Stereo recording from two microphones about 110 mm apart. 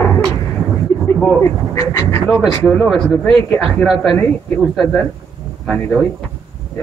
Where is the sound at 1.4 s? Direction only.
25° left (ahead or behind).